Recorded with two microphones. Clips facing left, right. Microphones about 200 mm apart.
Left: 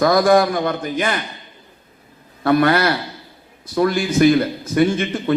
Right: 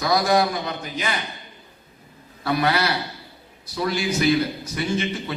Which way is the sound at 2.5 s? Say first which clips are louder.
Left 7 dB; 50° left (ahead or behind).